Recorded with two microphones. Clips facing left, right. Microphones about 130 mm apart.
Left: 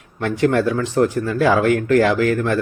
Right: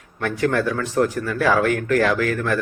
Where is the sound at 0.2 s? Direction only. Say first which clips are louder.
Left 3 dB; 25° left (ahead or behind).